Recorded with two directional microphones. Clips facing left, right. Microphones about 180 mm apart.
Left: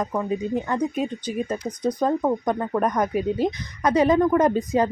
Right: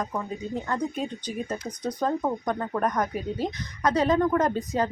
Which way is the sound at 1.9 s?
15° left (ahead or behind).